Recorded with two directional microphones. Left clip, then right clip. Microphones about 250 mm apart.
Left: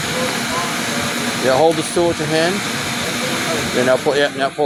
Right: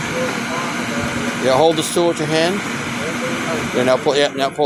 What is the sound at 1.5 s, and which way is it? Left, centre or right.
Speech, centre.